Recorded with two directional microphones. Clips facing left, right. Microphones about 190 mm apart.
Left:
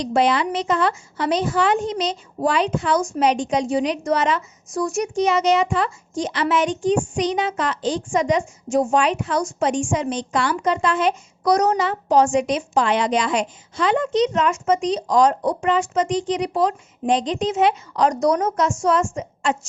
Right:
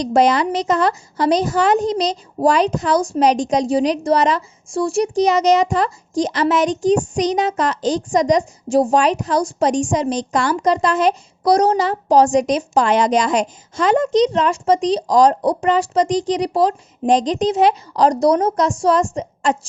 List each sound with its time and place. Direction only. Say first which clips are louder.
0.0 s a woman's voice: right 4 dB; 40° right (ahead or behind)